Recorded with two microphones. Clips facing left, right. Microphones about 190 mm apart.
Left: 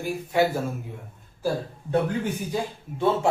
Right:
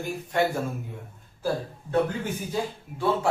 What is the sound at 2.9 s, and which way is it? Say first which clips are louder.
Speech: left 3 dB; 20° left (ahead or behind).